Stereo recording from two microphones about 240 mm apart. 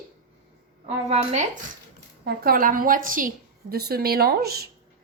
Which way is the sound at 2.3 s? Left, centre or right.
Right.